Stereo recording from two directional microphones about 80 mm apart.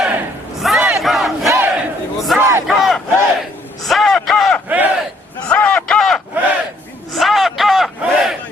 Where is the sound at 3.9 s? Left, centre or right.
Centre.